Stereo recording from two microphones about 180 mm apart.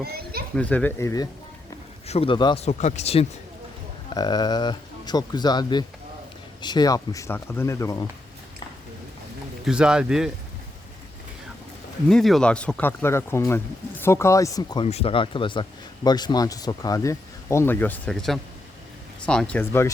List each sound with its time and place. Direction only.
0.0 s children playing: 60° right (ahead or behind)
0.5 s speech: 10° left (ahead or behind)
2.0 s speech: 30° left (ahead or behind)
2.6 s speech: 40° left (ahead or behind)
4.1 s speech: 20° left (ahead or behind)
9.6 s speech: 5° right (ahead or behind)
12.0 s speech: centre (ahead or behind); by 14.8 s 20° left (ahead or behind)
14.8 s speech: 35° left (ahead or behind); by 19.9 s 10° left (ahead or behind)